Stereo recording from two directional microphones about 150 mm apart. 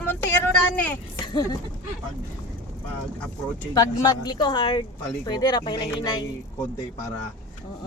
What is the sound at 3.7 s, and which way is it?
Speech, 30° left (ahead or behind).